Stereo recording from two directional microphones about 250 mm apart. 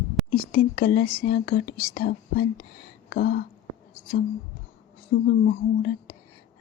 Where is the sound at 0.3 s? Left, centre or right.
Left.